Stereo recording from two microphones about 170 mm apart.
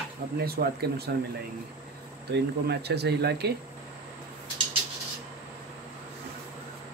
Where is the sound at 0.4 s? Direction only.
70° right (ahead or behind).